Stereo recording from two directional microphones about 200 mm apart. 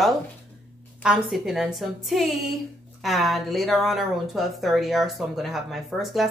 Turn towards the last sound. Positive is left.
turn(degrees=0)  # may be behind; listen again after turning